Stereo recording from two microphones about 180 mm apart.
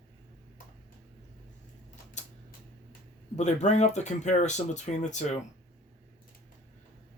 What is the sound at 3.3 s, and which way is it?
Speech, 40° left (ahead or behind).